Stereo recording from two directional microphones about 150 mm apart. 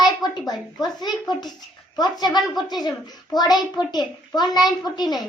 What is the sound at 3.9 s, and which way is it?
A child's voice, 25° left (ahead or behind).